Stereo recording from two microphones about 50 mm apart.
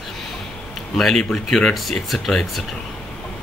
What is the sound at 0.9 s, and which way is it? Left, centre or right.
Speech, centre.